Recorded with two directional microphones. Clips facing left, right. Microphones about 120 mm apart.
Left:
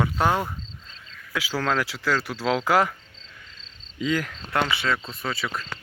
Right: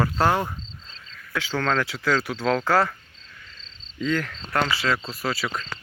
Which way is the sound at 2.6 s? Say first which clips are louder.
Left 1 dB; 15° left (ahead or behind).